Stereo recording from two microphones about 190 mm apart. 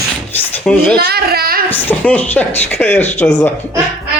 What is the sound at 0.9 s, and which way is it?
Speech, 55° right (ahead or behind).